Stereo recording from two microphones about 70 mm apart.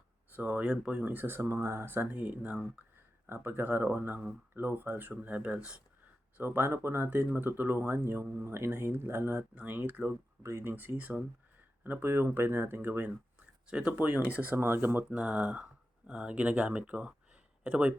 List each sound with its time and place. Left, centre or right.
0.3 s speech: centre
1.0 s speech: right
3.2 s speech: right; by 5.8 s centre
6.3 s speech: right
10.4 s speech: right
15.1 s speech: centre